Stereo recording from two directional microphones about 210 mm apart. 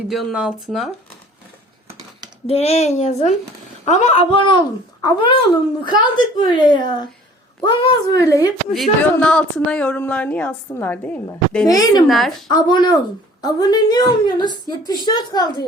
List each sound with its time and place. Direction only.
0.1 s speech: centre (ahead or behind)
2.5 s a woman's voice: 30° left (ahead or behind)
8.7 s speech: 5° left (ahead or behind)
12.0 s speech: centre (ahead or behind)
12.5 s a woman's voice: 20° left (ahead or behind)